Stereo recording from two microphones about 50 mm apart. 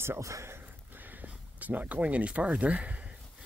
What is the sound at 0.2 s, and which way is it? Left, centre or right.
Speech, right.